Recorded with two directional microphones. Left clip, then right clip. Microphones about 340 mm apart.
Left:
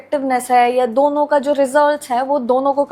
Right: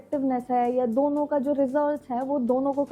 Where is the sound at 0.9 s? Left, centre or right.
Centre.